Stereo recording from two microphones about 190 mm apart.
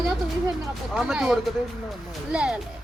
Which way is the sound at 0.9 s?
Centre (ahead or behind).